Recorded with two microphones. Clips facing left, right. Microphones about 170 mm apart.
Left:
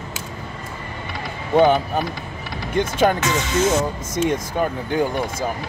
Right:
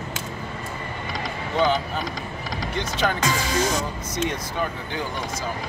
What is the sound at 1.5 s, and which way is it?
Speech, 55° left (ahead or behind).